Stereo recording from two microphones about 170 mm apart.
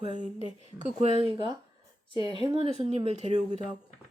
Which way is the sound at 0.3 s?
35° left (ahead or behind).